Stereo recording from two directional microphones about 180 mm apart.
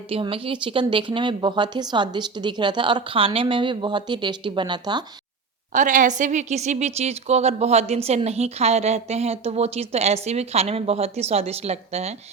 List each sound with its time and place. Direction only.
0.1 s a woman's voice: 30° right (ahead or behind)
5.7 s a woman's voice: 45° right (ahead or behind)